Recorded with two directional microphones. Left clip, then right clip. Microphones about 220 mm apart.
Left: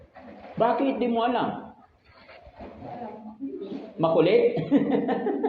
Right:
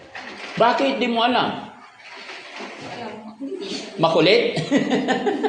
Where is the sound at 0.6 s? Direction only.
60° right (ahead or behind).